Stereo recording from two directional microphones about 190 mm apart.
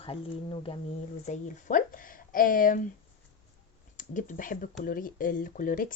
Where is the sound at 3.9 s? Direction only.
40° left (ahead or behind).